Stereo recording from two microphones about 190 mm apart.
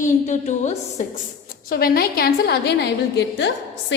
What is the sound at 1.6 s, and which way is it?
A woman's voice, 50° left (ahead or behind).